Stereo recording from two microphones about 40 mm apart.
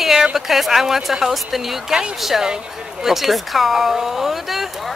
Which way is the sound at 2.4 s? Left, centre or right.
Centre.